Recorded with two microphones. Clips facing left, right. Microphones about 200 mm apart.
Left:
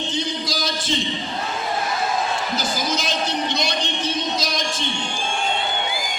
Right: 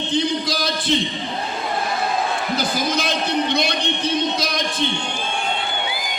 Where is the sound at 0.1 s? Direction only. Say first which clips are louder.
Right 5 dB; 60° right (ahead or behind).